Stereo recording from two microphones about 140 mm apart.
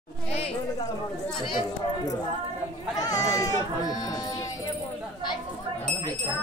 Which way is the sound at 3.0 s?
25° left (ahead or behind).